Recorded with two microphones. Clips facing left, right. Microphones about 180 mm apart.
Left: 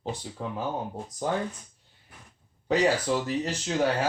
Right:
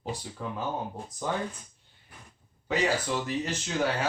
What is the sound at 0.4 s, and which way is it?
Speech, 30° left (ahead or behind).